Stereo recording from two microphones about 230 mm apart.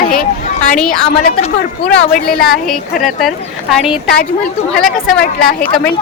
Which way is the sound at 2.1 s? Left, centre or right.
Left.